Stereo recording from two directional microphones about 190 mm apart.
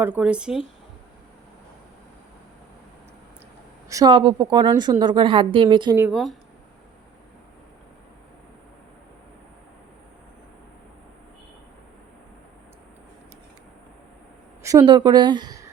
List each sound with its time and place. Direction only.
0.0 s speech: 5° right (ahead or behind)
3.8 s a woman's voice: 20° right (ahead or behind)
6.1 s speech: centre (ahead or behind)
14.6 s speech: 15° right (ahead or behind)